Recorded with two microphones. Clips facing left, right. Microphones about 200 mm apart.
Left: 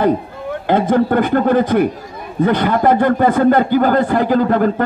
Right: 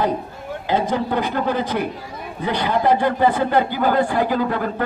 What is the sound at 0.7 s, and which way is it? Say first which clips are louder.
A man's voice: left 7 dB; 55° left (ahead or behind).